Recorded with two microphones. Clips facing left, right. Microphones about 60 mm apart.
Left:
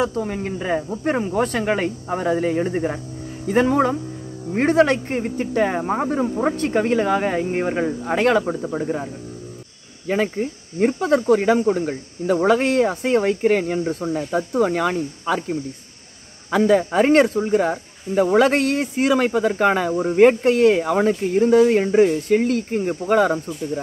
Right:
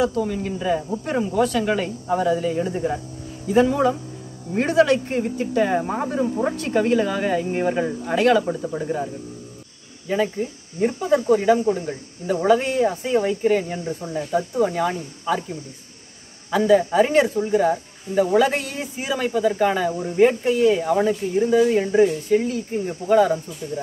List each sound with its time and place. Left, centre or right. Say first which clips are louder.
0.0 s speech: right 1 dB; left
10.0 s speech: left 1 dB; left
11.0 s speech: even; left
16.5 s speech: even; left